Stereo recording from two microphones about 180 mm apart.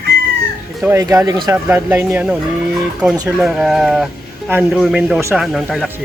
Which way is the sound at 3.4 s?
Centre (ahead or behind).